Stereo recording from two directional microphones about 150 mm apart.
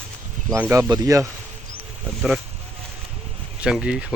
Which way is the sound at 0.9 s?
25° right (ahead or behind).